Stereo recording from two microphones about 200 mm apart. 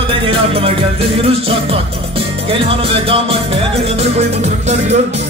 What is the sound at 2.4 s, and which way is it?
Music, 30° right (ahead or behind).